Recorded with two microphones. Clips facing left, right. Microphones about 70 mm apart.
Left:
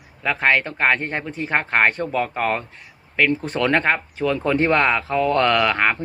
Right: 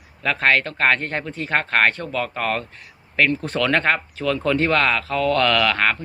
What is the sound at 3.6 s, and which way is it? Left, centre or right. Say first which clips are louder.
Speech: even; left.